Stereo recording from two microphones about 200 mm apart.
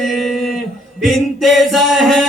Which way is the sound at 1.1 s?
Centre (ahead or behind).